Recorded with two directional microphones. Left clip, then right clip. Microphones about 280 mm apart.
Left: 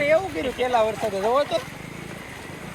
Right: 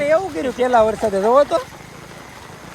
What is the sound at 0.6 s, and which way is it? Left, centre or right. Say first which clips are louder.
Speech: right 7 dB; right.